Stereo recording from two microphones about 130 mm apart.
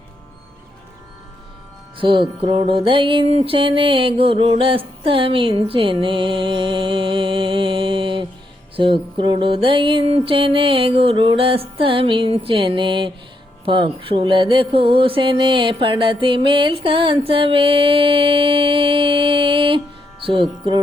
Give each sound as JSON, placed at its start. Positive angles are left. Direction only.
{"t": 2.0, "sound": "music", "side_deg": -40}